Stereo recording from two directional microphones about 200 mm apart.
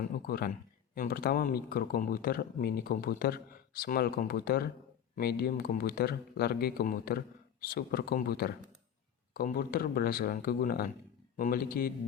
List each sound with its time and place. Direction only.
0.0 s speech: 50° left (ahead or behind)